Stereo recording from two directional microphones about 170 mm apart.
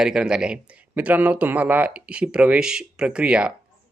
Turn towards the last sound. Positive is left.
turn(degrees=-5)  # may be behind; listen again after turning